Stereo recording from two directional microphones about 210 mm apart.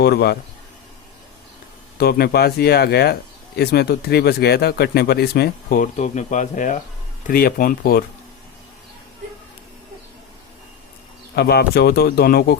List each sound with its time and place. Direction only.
0.0 s speech: 50° left (ahead or behind)
2.0 s speech: 50° left (ahead or behind)
11.3 s speech: 50° left (ahead or behind)